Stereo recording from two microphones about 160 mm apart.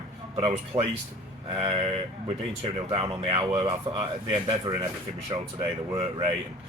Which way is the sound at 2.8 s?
35° right (ahead or behind).